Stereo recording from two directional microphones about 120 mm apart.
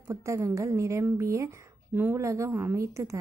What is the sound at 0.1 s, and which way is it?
A woman's voice, 25° right (ahead or behind).